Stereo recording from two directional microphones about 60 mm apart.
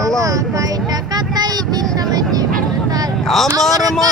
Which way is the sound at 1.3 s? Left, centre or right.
Right.